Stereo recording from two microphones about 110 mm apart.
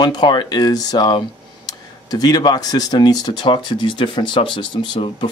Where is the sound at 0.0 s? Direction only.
45° left (ahead or behind).